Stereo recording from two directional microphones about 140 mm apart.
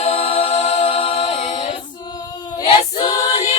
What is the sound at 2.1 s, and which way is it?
Female singing, 30° left (ahead or behind).